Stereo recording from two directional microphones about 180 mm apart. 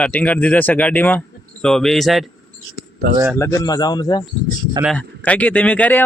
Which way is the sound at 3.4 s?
15° left (ahead or behind).